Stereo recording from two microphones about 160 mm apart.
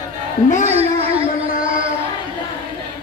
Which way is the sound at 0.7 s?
40° right (ahead or behind).